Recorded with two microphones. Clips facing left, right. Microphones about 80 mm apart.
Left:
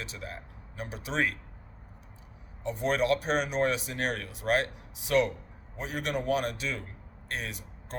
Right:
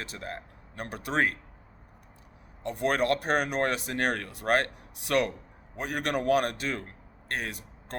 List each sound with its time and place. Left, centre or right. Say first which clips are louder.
0.1 s speech: right 3 dB; right
2.6 s a man's voice: right 1 dB; right